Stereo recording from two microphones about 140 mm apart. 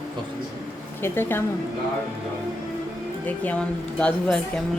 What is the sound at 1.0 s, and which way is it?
Speech, 15° left (ahead or behind).